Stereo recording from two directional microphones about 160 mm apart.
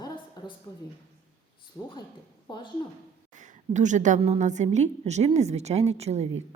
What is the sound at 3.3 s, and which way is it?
A woman's voice, 50° right (ahead or behind).